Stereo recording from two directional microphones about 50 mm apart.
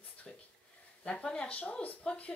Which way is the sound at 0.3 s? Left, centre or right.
Centre.